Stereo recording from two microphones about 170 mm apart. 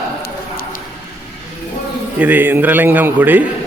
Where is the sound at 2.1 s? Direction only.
10° right (ahead or behind).